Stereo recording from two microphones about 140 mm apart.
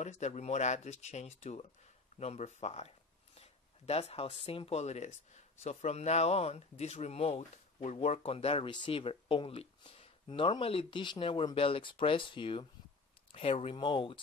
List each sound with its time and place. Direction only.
0.0 s speech: 55° left (ahead or behind)
3.3 s a sound: 50° left (ahead or behind)
4.5 s speech: 45° left (ahead or behind)